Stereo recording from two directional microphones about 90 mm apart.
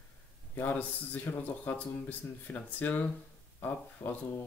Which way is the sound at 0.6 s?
15° left (ahead or behind).